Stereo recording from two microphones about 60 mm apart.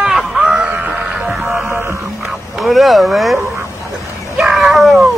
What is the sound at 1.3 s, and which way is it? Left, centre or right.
Music, centre.